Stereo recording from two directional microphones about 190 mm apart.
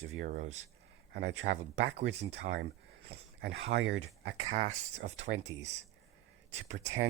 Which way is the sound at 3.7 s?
65° right (ahead or behind).